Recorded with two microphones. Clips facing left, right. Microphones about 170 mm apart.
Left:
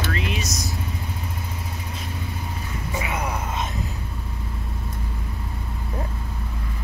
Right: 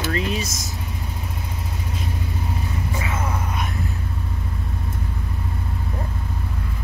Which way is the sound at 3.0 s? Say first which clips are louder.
Even; 15° left (ahead or behind).